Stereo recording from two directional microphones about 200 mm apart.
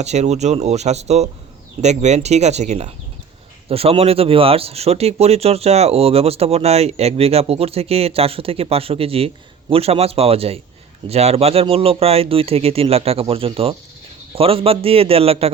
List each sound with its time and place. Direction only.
0.0 s speech: 35° right (ahead or behind)